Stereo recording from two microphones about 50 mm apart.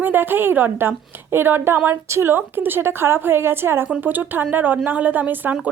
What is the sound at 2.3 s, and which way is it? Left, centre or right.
A woman's voice, right.